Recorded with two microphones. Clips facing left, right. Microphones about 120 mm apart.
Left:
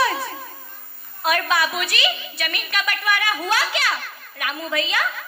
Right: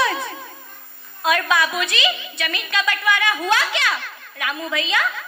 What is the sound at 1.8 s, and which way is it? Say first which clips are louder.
A woman's voice: right 2 dB; 20° right (ahead or behind).